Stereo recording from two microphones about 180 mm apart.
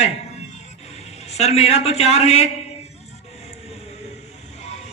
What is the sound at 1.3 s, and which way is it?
A man's voice, 35° left (ahead or behind).